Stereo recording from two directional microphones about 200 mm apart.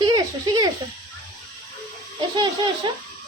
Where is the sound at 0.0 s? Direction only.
20° right (ahead or behind).